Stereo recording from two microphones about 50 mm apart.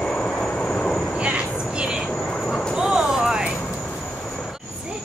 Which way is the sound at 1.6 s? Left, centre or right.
Centre.